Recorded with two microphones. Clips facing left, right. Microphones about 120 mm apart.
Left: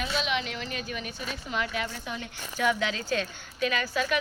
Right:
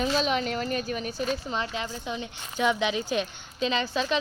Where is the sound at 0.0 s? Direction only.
40° right (ahead or behind).